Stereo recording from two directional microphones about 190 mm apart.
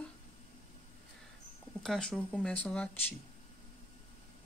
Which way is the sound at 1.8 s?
5° left (ahead or behind).